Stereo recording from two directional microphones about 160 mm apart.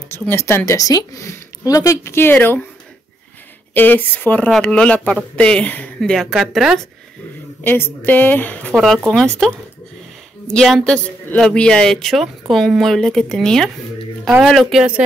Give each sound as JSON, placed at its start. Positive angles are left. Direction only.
{"t": 0.1, "sound": "speech", "side_deg": 15}
{"t": 3.7, "sound": "speech", "side_deg": 10}
{"t": 7.6, "sound": "speech", "side_deg": 15}